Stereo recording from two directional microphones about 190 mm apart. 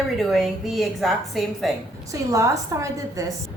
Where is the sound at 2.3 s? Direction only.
15° right (ahead or behind).